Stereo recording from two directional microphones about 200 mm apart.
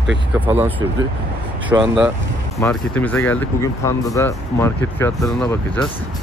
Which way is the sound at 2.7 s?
10° left (ahead or behind).